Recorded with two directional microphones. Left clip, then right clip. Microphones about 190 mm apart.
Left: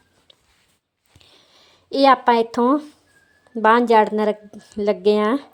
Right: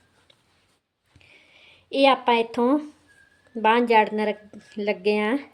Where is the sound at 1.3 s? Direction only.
35° left (ahead or behind).